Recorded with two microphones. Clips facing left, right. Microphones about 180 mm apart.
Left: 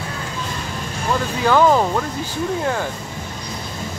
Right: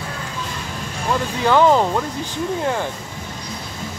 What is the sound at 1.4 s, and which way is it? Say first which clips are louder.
Speech: even; 20° right (ahead or behind).